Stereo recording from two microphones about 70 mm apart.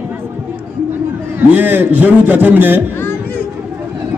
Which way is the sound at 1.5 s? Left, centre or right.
Right.